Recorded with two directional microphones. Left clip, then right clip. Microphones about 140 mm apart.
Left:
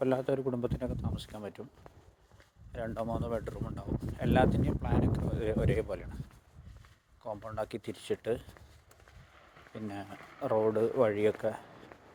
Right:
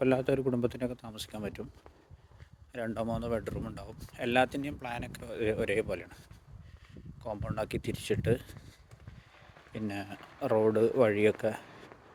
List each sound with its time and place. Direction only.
0.0 s speech: 60° right (ahead or behind)
2.7 s speech: 55° right (ahead or behind)
7.2 s speech: 60° right (ahead or behind)
9.7 s speech: 55° right (ahead or behind)